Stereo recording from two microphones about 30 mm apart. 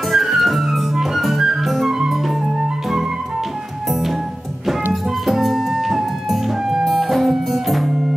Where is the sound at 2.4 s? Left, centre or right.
Centre.